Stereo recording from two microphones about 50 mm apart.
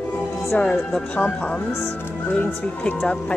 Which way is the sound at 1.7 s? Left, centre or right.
Centre.